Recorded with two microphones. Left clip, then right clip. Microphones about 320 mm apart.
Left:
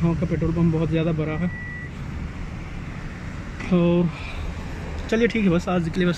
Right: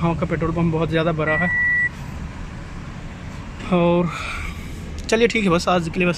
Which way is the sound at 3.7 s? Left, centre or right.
Right.